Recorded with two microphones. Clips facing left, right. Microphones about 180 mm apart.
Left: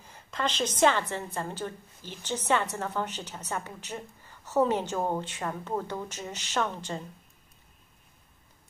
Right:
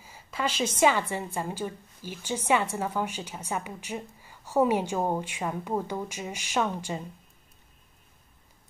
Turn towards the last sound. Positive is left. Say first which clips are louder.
# right 2 dB
turn(degrees=-10)  # may be behind; listen again after turning